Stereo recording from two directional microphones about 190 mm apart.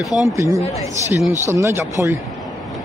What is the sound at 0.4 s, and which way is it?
Speech, 15° right (ahead or behind).